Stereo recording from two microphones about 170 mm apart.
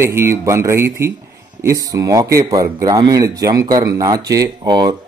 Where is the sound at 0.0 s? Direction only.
15° right (ahead or behind).